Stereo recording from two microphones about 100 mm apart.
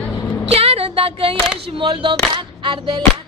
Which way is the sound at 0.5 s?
80° right.